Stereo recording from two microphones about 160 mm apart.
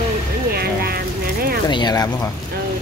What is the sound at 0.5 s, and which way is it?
Speech, 75° right (ahead or behind).